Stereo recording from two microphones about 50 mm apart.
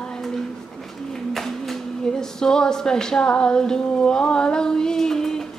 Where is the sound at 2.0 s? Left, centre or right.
Centre.